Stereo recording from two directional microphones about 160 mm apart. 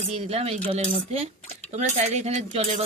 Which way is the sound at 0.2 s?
40° right (ahead or behind).